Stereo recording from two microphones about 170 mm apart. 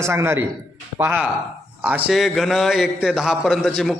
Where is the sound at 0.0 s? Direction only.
15° right (ahead or behind).